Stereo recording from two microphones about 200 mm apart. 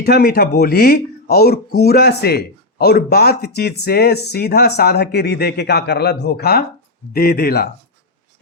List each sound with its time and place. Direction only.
0.0 s speech: 50° left (ahead or behind)